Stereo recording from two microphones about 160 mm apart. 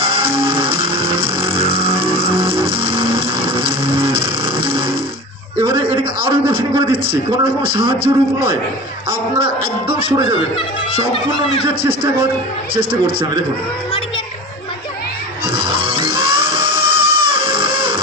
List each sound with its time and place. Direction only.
0.1 s music: 35° right (ahead or behind)
5.5 s a man's voice: 30° right (ahead or behind)
10.0 s speech: 30° right (ahead or behind)
11.1 s speech: 35° left (ahead or behind)
11.6 s a man's voice: 30° right (ahead or behind)
15.5 s music: 30° right (ahead or behind)